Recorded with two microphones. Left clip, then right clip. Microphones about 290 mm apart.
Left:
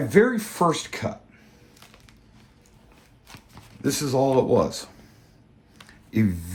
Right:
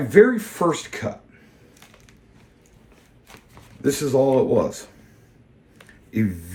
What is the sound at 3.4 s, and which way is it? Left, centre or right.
Speech, centre.